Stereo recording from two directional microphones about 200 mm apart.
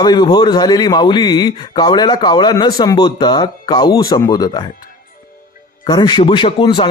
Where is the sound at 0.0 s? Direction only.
20° left (ahead or behind).